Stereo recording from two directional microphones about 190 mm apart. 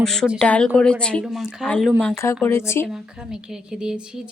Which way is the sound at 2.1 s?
15° left (ahead or behind).